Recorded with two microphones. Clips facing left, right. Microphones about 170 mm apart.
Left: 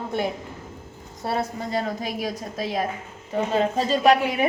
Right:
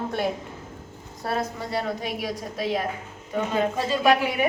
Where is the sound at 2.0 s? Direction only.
40° left (ahead or behind).